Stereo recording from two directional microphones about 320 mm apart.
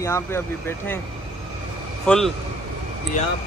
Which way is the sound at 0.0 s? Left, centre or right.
Centre.